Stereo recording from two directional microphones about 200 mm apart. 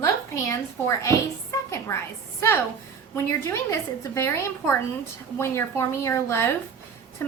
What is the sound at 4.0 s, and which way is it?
A woman's voice, 15° left (ahead or behind).